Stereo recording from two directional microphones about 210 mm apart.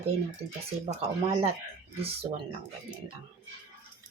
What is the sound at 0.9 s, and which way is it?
Speech, 35° right (ahead or behind).